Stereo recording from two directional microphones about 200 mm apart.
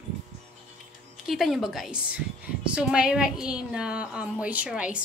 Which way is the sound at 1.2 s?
Centre (ahead or behind).